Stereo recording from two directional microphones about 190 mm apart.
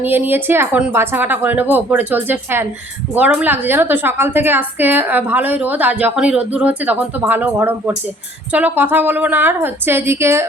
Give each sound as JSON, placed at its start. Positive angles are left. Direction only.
{"t": 0.0, "sound": "a woman's voice", "side_deg": -10}